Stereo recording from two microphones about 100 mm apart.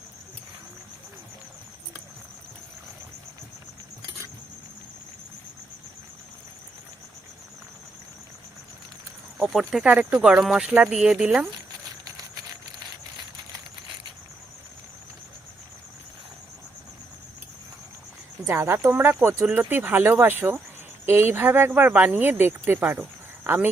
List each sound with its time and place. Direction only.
9.4 s speech: centre (ahead or behind)
9.8 s speech: 15° right (ahead or behind)
18.4 s speech: 25° right (ahead or behind)